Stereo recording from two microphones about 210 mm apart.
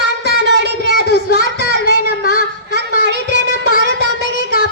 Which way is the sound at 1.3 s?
55° right (ahead or behind).